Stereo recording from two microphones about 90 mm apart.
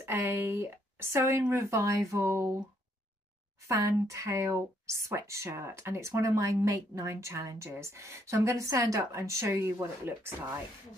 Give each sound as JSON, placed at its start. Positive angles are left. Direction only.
{"t": 0.0, "sound": "speech", "side_deg": -25}
{"t": 3.6, "sound": "speech", "side_deg": -35}